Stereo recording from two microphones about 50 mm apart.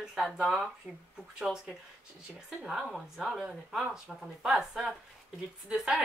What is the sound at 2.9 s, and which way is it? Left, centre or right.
Speech, centre.